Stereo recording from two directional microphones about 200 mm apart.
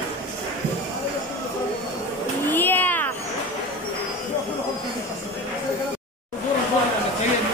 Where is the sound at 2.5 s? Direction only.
10° left (ahead or behind).